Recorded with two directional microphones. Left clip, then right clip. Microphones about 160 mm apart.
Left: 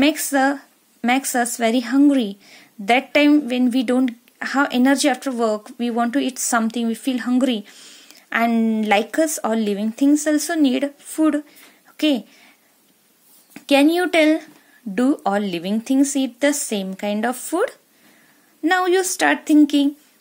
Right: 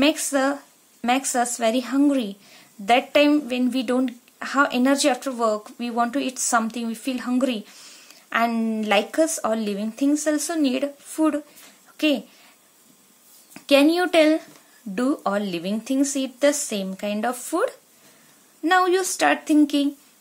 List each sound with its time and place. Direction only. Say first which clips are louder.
0.0 s a woman's voice: left 3 dB; 30° left (ahead or behind)
13.5 s a woman's voice: left 1 dB; 30° left (ahead or behind)